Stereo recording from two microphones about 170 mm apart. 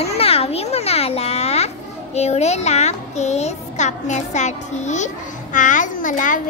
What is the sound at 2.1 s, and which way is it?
A child's voice, 40° left (ahead or behind).